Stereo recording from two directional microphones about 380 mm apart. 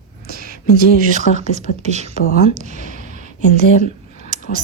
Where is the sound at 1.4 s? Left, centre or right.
Centre.